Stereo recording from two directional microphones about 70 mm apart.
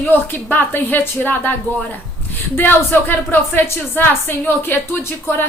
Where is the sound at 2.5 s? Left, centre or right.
Left.